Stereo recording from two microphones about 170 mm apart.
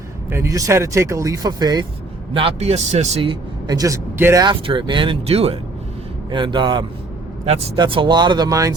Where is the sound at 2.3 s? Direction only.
35° right (ahead or behind).